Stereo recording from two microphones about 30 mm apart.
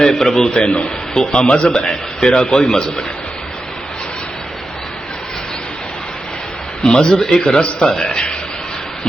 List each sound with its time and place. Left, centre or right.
0.0 s a man's voice: centre
1.4 s speech: left
1.6 s a man's voice: left
6.8 s a man's voice: left